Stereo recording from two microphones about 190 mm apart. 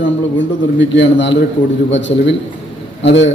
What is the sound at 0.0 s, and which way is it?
A man's voice, 70° left (ahead or behind).